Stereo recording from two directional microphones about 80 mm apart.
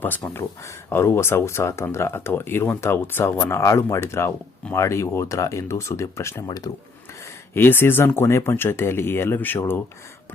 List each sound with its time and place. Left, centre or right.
0.3 s speech: left
6.7 s speech: left
7.5 s speech: left